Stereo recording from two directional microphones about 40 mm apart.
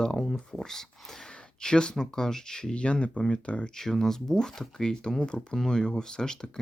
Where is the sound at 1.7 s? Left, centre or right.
Left.